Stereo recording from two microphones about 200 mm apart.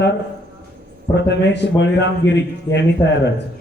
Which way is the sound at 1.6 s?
60° left (ahead or behind).